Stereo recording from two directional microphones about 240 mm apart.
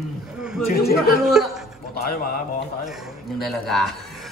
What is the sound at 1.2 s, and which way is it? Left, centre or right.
Speech, centre.